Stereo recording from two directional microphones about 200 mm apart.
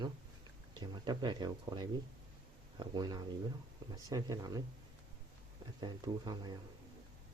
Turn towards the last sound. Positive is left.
turn(degrees=-20)  # may be behind; listen again after turning